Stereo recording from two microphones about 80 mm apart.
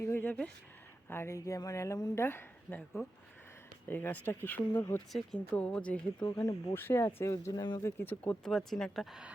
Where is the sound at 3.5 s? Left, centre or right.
Left.